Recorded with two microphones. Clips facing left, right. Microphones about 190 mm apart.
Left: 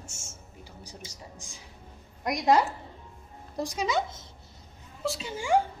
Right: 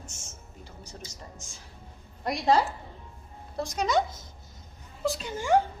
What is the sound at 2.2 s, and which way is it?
Speech, 30° right (ahead or behind).